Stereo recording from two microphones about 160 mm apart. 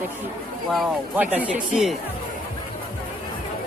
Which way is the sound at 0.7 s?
5° right (ahead or behind).